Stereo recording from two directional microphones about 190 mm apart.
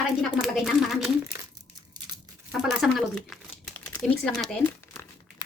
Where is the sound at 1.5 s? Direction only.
20° right (ahead or behind).